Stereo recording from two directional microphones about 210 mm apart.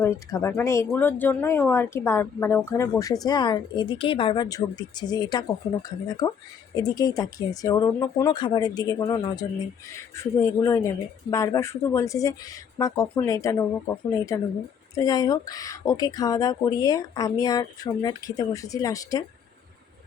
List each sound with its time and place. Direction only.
0.0 s a woman's voice: 15° left (ahead or behind)